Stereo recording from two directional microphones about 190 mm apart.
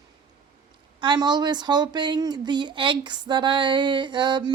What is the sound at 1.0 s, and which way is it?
Speech, 25° right (ahead or behind).